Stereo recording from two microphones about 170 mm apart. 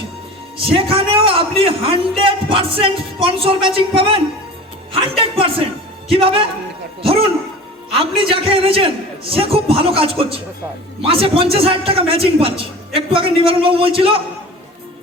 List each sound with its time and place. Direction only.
0.5 s a man's voice: 30° right (ahead or behind)
7.9 s a man's voice: 30° right (ahead or behind)